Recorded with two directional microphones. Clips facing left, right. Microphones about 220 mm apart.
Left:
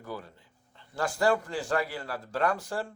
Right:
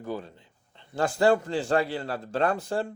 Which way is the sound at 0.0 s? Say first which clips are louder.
Right 6 dB; 25° right (ahead or behind).